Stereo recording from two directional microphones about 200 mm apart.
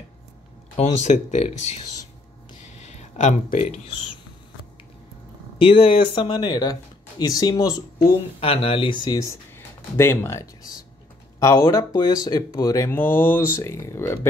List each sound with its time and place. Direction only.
0.7 s speech: 35° left (ahead or behind)
5.6 s speech: 25° left (ahead or behind)